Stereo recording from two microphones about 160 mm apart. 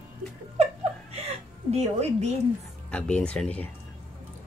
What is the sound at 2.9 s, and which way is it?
Speech, 5° left (ahead or behind).